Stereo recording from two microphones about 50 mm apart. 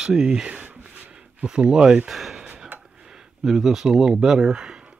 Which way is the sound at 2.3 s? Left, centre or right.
Right.